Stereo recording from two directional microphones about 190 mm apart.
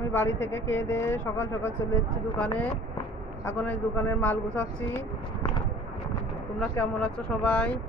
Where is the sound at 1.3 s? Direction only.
90° left.